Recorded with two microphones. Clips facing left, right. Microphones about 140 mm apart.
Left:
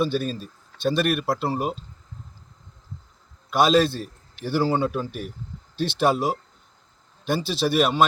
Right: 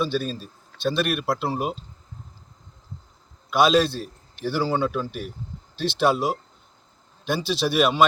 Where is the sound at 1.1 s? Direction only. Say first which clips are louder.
Left 1 dB; 10° right (ahead or behind).